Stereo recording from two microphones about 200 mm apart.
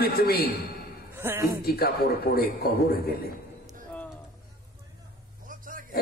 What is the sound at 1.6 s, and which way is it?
A man's voice, 50° left (ahead or behind).